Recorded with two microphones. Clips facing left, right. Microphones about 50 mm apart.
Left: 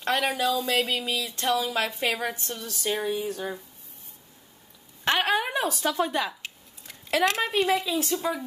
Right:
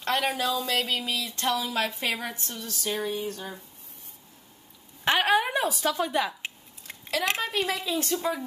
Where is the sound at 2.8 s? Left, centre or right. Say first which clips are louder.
Left 2 dB; centre.